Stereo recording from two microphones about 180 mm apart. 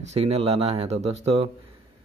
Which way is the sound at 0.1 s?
35° right (ahead or behind).